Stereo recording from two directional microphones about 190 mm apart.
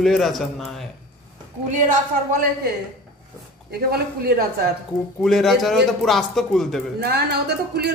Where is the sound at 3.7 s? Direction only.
55° right (ahead or behind).